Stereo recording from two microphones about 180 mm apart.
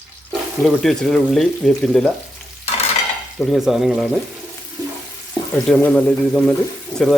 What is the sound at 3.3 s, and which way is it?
Speech, centre (ahead or behind).